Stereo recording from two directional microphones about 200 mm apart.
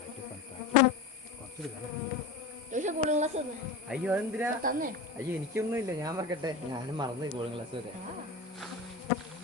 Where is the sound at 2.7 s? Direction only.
35° right (ahead or behind).